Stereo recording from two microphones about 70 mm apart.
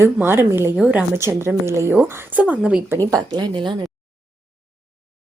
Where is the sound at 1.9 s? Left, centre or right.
Right.